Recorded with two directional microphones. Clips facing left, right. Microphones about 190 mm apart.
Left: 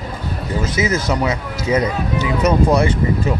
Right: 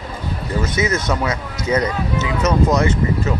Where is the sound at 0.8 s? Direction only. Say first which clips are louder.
Left 2 dB; 25° left (ahead or behind).